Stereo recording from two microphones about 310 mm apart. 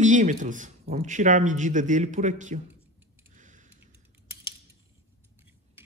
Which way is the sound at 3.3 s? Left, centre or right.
Right.